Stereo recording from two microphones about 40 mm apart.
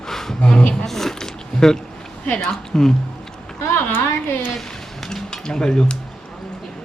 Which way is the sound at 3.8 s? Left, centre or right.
Left.